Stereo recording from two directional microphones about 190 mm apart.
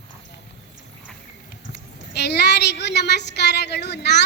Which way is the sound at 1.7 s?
60° left (ahead or behind).